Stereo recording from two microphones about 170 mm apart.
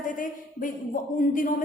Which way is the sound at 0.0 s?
50° left (ahead or behind).